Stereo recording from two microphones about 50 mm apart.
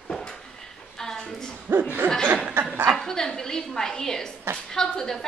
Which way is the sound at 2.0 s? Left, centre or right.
Right.